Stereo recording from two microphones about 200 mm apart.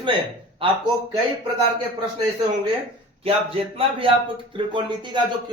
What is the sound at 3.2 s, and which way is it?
Speech, 25° right (ahead or behind).